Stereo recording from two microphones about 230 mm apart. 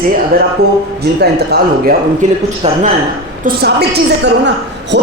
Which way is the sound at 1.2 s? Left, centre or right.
Right.